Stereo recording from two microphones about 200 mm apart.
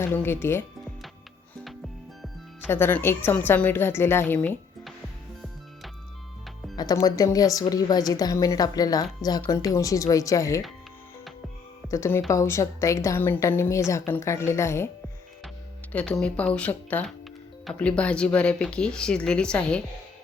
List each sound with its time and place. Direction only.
0.1 s a woman's voice: 10° left (ahead or behind)
2.6 s a woman's voice: 10° left (ahead or behind)
6.7 s a woman's voice: 20° left (ahead or behind)
11.9 s a woman's voice: 15° left (ahead or behind)
15.9 s a woman's voice: 5° left (ahead or behind)